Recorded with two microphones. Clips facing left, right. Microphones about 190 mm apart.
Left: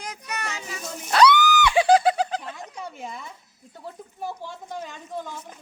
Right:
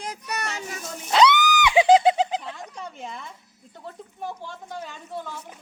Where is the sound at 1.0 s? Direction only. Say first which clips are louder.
Left 1 dB; 20° right (ahead or behind).